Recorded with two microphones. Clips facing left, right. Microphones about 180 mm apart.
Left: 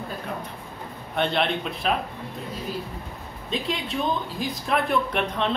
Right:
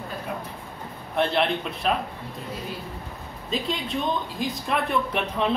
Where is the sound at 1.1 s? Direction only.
Centre (ahead or behind).